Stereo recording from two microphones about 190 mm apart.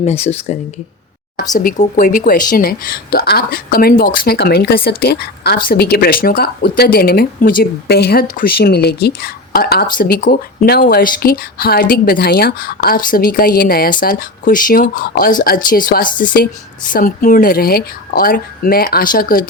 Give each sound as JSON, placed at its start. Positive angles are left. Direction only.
{"t": 0.0, "sound": "speech", "side_deg": 35}
{"t": 1.5, "sound": "speech", "side_deg": 45}